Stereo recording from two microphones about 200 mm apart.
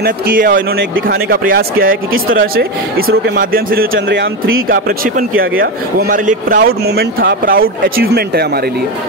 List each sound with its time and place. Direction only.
0.0 s a man's voice: 45° right (ahead or behind)
3.9 s speech: 70° right (ahead or behind)
4.6 s a man's voice: 45° right (ahead or behind)